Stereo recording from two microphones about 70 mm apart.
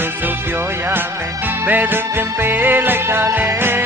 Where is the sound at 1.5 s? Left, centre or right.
Right.